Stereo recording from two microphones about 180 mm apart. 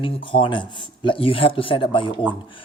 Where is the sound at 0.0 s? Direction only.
30° left (ahead or behind).